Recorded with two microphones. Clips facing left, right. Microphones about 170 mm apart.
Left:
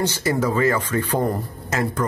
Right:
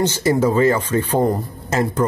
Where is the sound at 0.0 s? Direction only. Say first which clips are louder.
Right 5 dB; 25° right (ahead or behind).